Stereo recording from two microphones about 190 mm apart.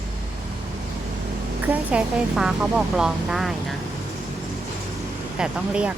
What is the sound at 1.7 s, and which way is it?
Speech, 5° right (ahead or behind).